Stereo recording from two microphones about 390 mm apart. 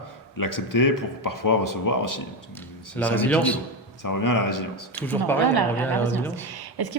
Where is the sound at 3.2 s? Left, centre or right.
Centre.